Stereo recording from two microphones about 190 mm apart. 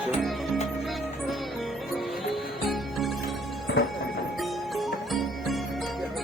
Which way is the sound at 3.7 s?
65° left (ahead or behind).